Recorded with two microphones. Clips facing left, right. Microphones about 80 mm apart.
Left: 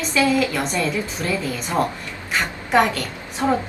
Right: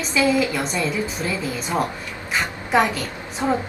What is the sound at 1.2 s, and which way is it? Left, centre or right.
Speech, centre.